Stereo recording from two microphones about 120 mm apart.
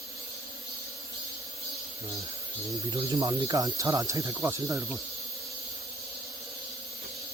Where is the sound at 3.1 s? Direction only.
30° right (ahead or behind).